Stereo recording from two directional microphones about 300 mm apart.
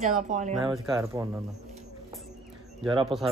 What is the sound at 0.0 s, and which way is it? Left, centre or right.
Speech, right.